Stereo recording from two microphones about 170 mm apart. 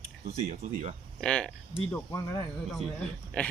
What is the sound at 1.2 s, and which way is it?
Speech, 5° left (ahead or behind).